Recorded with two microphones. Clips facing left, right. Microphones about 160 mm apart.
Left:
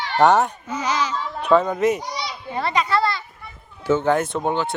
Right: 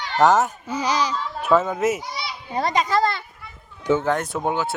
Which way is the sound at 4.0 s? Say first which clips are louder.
Left 3 dB; centre (ahead or behind).